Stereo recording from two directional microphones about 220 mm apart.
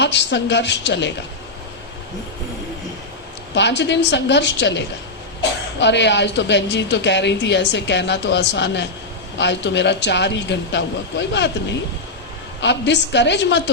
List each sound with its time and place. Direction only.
0.0 s speech: 50° left (ahead or behind)
3.5 s speech: 50° left (ahead or behind)